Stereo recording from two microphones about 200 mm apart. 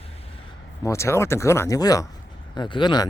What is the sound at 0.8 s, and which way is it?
Speech, 15° left (ahead or behind).